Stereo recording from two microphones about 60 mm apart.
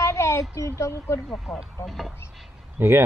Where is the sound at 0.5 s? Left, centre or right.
Left.